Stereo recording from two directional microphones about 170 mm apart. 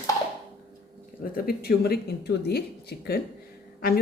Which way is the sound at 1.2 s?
60° left (ahead or behind).